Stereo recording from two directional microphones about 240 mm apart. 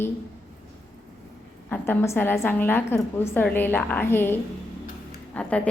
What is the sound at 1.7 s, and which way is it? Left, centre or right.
A woman's voice, centre.